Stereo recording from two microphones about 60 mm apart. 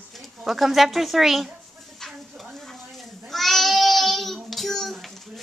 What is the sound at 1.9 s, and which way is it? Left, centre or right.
Babbling, centre.